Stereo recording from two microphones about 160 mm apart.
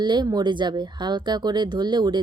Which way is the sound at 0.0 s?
25° right (ahead or behind).